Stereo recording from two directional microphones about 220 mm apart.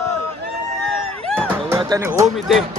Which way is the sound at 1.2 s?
5° left (ahead or behind).